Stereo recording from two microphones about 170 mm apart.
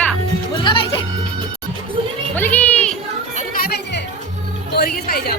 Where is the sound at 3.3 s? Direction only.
55° left (ahead or behind).